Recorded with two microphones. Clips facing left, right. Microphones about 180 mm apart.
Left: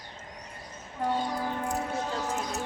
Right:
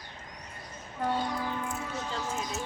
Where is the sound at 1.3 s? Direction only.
40° left (ahead or behind).